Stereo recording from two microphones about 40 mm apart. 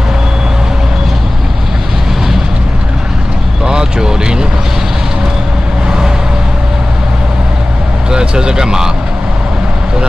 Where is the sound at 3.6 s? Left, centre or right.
Centre.